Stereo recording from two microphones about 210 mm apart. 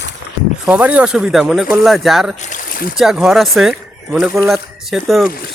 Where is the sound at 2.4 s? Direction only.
40° left (ahead or behind).